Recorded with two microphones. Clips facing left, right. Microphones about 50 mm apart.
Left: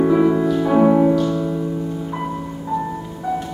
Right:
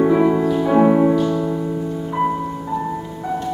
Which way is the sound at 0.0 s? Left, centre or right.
Centre.